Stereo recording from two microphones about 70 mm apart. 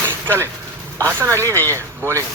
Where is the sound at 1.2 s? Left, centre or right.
Right.